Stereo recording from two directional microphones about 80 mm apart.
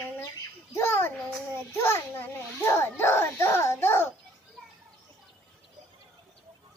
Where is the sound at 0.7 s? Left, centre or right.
Left.